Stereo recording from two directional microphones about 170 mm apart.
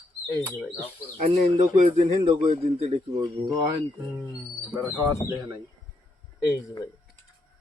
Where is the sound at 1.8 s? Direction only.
40° right (ahead or behind).